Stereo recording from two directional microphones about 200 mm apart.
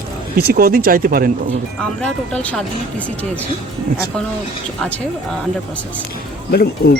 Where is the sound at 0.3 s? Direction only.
50° right (ahead or behind).